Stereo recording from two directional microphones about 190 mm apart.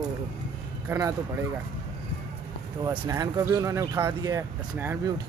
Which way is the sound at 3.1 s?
20° right (ahead or behind).